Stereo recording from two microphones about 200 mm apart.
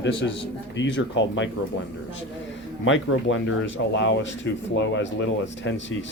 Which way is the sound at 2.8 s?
75° left (ahead or behind).